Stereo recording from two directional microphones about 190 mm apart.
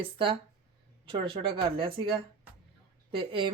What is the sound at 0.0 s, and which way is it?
Speech, 25° right (ahead or behind).